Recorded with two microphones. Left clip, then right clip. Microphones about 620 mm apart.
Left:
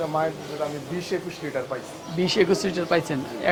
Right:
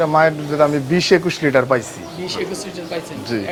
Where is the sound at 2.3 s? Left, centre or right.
Left.